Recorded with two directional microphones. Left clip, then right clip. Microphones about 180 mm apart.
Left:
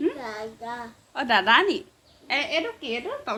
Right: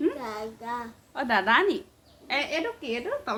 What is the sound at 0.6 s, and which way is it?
Child singing, 20° right (ahead or behind).